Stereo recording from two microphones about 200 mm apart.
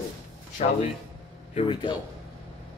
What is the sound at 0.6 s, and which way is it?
A man's voice, 35° left (ahead or behind).